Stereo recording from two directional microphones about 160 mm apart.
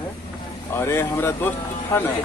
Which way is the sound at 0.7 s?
15° left (ahead or behind).